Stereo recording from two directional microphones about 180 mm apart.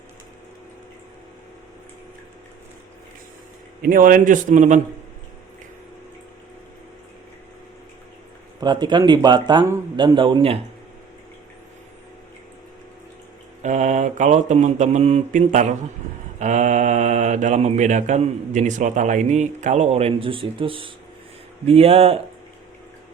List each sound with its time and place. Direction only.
3.8 s a man's voice: 50° right (ahead or behind)
8.6 s speech: 25° right (ahead or behind)
13.6 s speech: 40° right (ahead or behind)